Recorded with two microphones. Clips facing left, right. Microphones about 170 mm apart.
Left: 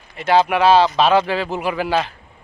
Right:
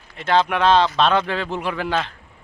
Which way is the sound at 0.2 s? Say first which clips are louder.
Left 3 dB; 10° left (ahead or behind).